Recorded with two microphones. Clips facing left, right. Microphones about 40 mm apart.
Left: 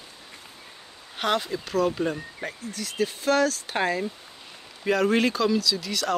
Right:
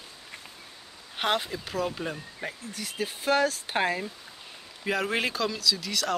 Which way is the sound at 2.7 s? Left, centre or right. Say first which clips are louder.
Left 8 dB; centre.